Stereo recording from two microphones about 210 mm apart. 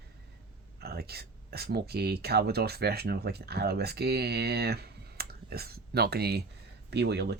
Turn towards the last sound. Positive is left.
turn(degrees=-50)  # may be behind; listen again after turning